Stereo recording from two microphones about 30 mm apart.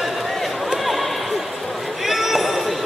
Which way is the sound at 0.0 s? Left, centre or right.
Centre.